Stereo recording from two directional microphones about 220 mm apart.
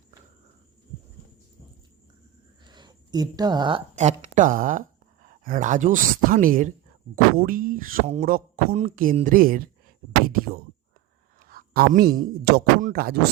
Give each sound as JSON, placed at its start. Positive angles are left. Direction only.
{"t": 2.6, "sound": "speech", "side_deg": -20}
{"t": 10.2, "sound": "a sound", "side_deg": -40}
{"t": 11.4, "sound": "speech", "side_deg": -40}